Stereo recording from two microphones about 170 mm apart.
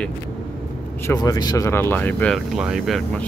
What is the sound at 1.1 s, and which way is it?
Speech, 20° left (ahead or behind).